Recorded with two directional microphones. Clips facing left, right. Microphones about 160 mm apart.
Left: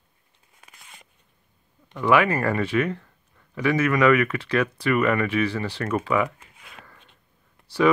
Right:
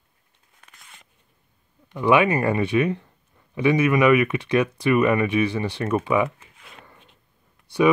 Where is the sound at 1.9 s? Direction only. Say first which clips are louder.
Right 2 dB; 20° right (ahead or behind).